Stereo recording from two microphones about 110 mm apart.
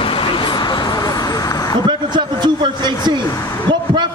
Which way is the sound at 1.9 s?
45° right (ahead or behind).